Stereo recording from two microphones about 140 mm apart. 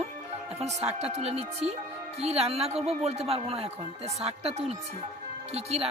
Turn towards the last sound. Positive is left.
turn(degrees=-45)  # may be behind; listen again after turning